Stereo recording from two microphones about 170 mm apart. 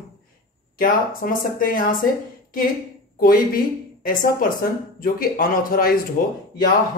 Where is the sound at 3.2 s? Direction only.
55° left (ahead or behind).